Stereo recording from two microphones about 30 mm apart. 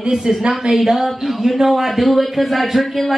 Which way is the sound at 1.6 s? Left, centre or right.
Centre.